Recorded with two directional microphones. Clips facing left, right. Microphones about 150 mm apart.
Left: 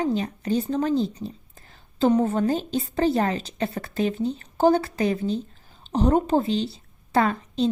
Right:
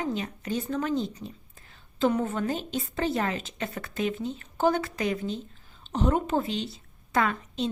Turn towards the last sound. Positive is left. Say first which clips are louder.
# left 5 dB
turn(degrees=35)  # may be behind; listen again after turning